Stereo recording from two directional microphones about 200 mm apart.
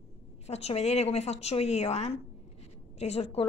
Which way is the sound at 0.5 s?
30° left (ahead or behind).